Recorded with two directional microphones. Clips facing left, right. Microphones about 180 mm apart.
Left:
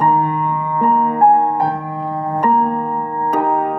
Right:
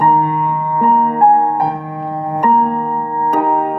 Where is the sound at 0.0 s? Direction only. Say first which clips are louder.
Right 2 dB; 30° right (ahead or behind).